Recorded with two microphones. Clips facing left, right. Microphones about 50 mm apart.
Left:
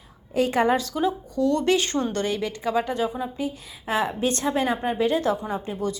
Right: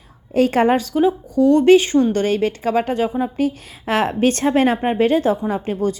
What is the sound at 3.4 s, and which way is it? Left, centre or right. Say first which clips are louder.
A woman's voice: right 9 dB; right.